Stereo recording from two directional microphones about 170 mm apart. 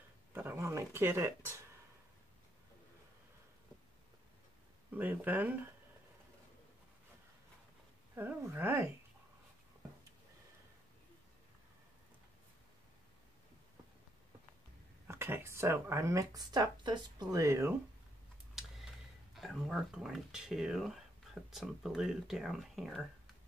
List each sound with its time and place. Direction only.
0.3 s speech: 15° right (ahead or behind)
4.9 s speech: 10° right (ahead or behind)
8.1 s speech: 10° right (ahead or behind)
15.0 s speech: 15° right (ahead or behind)
18.5 s tick: centre (ahead or behind)
19.3 s speech: centre (ahead or behind)